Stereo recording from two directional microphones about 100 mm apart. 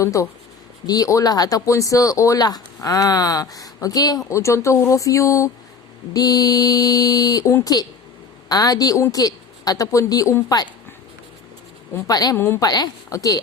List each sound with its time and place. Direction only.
0.0 s speech: 30° left (ahead or behind)
4.3 s speech: 30° left (ahead or behind)
12.0 s speech: 40° left (ahead or behind)